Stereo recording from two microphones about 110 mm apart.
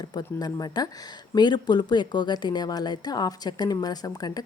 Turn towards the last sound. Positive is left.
turn(degrees=35)  # may be behind; listen again after turning